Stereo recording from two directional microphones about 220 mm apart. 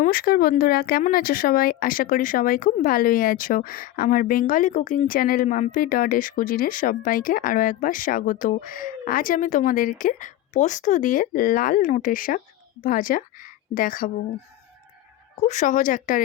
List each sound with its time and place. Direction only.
0.0 s a woman's voice: 40° left (ahead or behind)
15.4 s speech: 35° left (ahead or behind)